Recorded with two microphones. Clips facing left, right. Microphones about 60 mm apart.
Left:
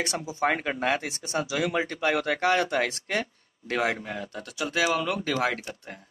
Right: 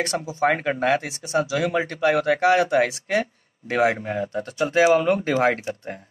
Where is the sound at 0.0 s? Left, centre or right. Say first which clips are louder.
Right 5 dB; centre.